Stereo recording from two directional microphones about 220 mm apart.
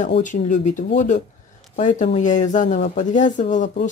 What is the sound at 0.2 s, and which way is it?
Speech, 35° left (ahead or behind).